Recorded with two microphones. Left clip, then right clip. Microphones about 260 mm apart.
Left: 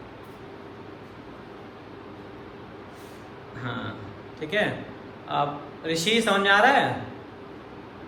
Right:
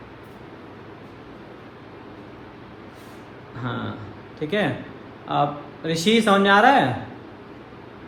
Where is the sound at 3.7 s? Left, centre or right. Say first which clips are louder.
Right 3 dB; centre.